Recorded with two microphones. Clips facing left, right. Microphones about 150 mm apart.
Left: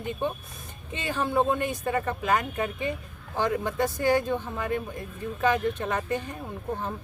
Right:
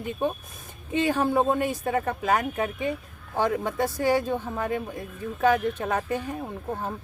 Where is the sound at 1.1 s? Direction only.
40° right (ahead or behind).